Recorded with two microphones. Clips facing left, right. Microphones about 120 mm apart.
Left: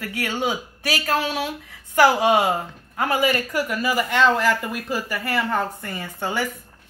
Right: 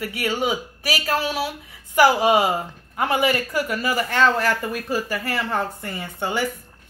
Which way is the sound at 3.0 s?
25° right (ahead or behind).